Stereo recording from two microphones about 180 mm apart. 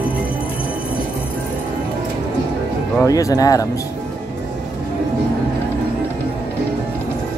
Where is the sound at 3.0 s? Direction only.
20° left (ahead or behind).